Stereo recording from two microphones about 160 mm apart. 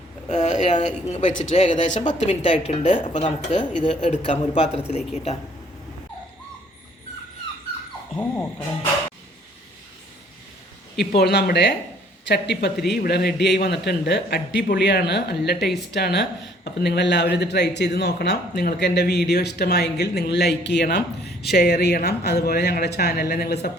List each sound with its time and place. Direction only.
0.3 s speech: 50° left (ahead or behind)
8.1 s speech: 10° left (ahead or behind)
10.9 s speech: 75° left (ahead or behind)